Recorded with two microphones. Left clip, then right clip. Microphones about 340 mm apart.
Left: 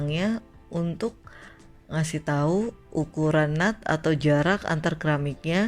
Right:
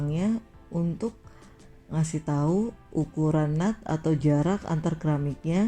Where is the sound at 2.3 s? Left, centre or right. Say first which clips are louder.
Left 3 dB; left.